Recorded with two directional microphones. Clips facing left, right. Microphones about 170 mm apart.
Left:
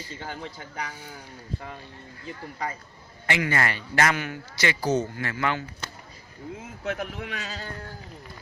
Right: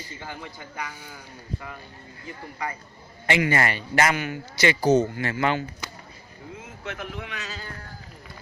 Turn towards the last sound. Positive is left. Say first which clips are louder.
# left 1 dB
turn(degrees=45)  # may be behind; listen again after turning